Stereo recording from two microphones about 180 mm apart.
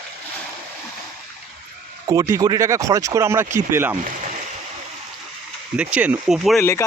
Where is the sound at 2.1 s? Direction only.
20° right (ahead or behind).